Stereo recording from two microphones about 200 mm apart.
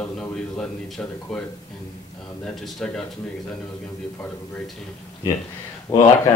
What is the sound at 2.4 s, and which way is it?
Speech, centre (ahead or behind).